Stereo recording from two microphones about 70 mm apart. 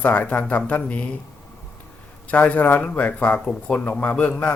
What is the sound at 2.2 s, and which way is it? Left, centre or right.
A man's voice, left.